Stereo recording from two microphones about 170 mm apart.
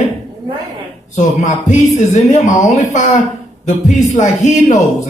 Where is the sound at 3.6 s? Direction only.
45° left (ahead or behind).